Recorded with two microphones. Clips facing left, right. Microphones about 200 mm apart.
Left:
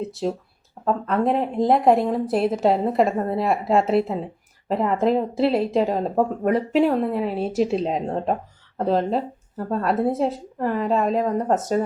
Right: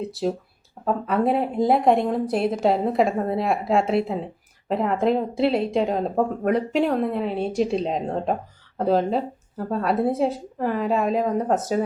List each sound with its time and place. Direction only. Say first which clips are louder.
0.0 s speech: even; centre (ahead or behind)